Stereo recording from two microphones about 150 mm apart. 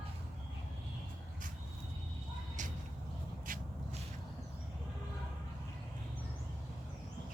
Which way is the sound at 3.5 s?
70° right (ahead or behind).